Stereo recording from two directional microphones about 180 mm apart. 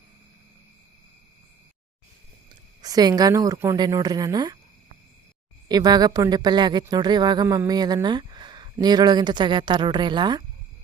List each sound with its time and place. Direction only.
2.8 s a woman's voice: 20° right (ahead or behind)
5.6 s a woman's voice: 20° right (ahead or behind)